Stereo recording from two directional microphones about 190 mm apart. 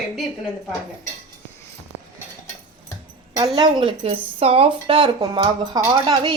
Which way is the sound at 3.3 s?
20° right (ahead or behind).